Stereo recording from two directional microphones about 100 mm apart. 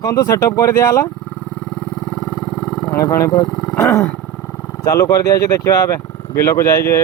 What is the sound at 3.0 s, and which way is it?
Speech, 35° left (ahead or behind).